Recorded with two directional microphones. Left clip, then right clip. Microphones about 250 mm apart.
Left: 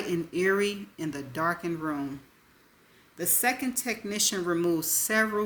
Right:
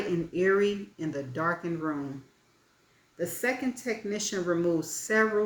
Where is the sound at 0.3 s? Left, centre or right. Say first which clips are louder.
Right 1 dB; left.